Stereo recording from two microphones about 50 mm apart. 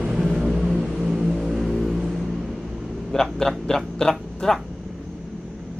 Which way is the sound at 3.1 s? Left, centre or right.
Centre.